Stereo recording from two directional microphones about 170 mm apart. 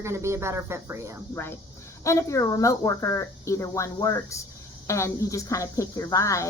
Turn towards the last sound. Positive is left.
turn(degrees=20)  # may be behind; listen again after turning